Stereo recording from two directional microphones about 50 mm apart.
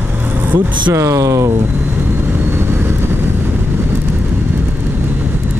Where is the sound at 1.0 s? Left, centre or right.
Right.